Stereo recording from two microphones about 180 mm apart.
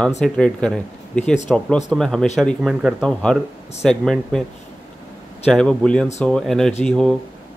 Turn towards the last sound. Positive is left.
turn(degrees=5)  # may be behind; listen again after turning